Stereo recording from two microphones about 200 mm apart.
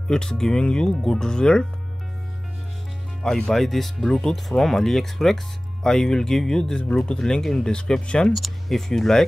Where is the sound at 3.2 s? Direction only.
5° left (ahead or behind).